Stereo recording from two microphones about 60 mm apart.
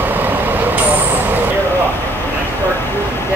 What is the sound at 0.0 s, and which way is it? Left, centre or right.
Vehicle, right.